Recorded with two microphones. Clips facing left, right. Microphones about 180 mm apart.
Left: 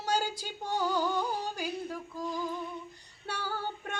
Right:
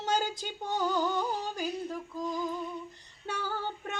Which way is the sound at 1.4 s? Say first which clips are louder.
Right 1 dB; 10° left (ahead or behind).